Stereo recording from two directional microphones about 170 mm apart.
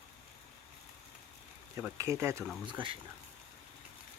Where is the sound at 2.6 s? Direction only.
30° right (ahead or behind).